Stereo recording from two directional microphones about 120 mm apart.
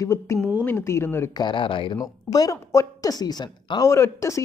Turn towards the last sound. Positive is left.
turn(degrees=25)  # may be behind; listen again after turning